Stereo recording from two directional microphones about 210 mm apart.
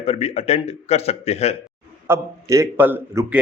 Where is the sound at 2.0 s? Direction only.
15° right (ahead or behind).